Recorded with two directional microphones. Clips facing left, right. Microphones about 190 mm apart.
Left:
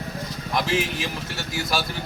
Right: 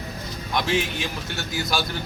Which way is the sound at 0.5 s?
5° left (ahead or behind).